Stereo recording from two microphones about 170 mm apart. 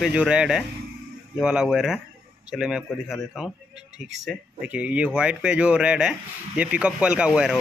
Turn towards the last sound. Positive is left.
turn(degrees=-5)  # may be behind; listen again after turning